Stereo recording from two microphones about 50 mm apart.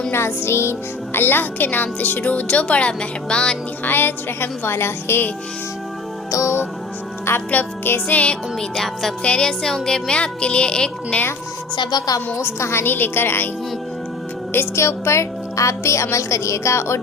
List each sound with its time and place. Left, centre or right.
0.1 s speech: left; by 3.6 s centre
3.8 s a woman's voice: left
7.5 s speech: left
8.7 s speech: centre
9.2 s speech: left
9.5 s speech: centre
12.5 s a woman's voice: left
12.8 s a woman's voice: left
14.8 s a woman's voice: left